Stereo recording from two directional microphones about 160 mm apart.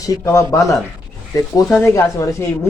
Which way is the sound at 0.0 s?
20° left (ahead or behind).